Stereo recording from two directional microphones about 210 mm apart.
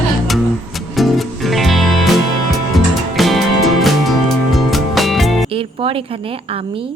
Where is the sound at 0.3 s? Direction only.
Centre (ahead or behind).